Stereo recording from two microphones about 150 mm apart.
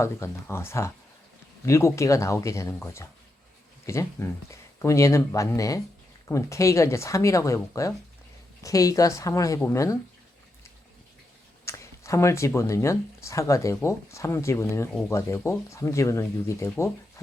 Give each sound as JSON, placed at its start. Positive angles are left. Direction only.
{"t": 0.0, "sound": "speech", "side_deg": 15}
{"t": 11.6, "sound": "speech", "side_deg": 20}